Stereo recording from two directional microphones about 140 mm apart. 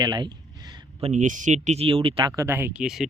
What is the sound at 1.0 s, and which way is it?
Speech, 60° right (ahead or behind).